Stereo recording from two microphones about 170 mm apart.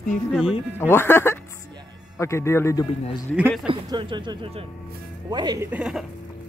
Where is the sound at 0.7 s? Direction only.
15° left (ahead or behind).